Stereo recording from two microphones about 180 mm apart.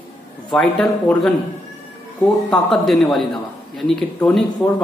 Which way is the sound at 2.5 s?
Centre (ahead or behind).